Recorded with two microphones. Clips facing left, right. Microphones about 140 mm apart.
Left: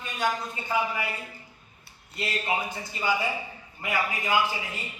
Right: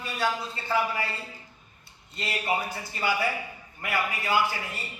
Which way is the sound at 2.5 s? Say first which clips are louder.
Right 4 dB; 20° left (ahead or behind).